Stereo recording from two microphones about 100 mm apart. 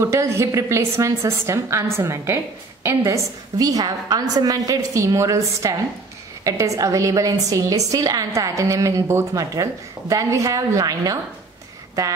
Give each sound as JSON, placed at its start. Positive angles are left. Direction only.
{"t": 0.0, "sound": "a woman's voice", "side_deg": -30}